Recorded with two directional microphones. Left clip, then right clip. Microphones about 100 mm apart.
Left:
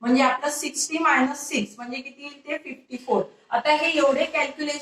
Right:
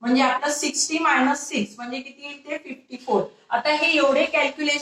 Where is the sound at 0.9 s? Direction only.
25° right (ahead or behind).